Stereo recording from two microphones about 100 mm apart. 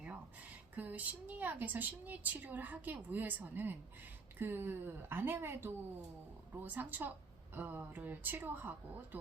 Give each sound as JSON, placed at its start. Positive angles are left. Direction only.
{"t": 0.8, "sound": "a woman's voice", "side_deg": -15}